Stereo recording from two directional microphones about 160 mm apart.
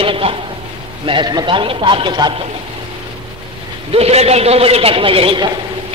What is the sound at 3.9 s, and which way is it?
A man's voice, 40° right (ahead or behind).